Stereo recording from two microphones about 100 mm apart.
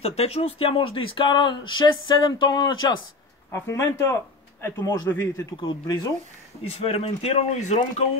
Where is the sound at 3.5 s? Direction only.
30° left (ahead or behind).